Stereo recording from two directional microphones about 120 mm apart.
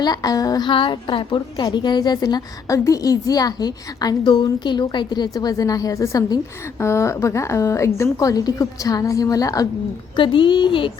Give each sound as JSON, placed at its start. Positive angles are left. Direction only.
{"t": 0.0, "sound": "a woman's voice", "side_deg": 35}
{"t": 10.2, "sound": "speech", "side_deg": 45}